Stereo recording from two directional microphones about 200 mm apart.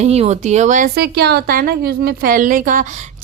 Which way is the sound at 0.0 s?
30° right (ahead or behind).